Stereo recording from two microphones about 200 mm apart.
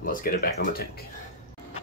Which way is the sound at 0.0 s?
45° left (ahead or behind).